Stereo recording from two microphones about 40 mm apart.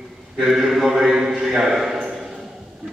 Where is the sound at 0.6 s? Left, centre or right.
Centre.